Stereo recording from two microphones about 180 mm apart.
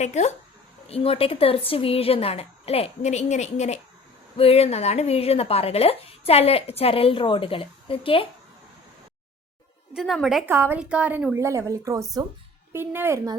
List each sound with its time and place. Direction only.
0.0 s speech: 40° left (ahead or behind)
9.9 s a woman's voice: centre (ahead or behind)
10.5 s a woman's voice: 10° right (ahead or behind)